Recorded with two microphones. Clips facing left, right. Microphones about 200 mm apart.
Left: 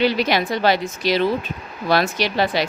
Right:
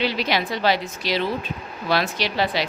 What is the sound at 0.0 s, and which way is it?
Speech, 50° left (ahead or behind).